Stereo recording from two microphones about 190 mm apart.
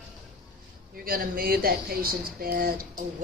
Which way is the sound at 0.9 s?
50° right (ahead or behind).